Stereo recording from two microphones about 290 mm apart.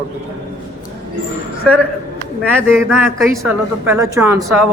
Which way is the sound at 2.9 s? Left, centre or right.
Centre.